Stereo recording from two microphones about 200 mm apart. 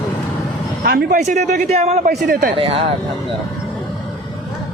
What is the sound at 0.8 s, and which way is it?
A man's voice, 50° right (ahead or behind).